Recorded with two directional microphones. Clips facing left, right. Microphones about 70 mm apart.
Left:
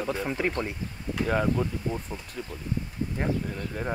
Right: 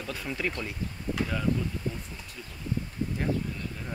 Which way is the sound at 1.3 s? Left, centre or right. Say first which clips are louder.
Left 7 dB; left.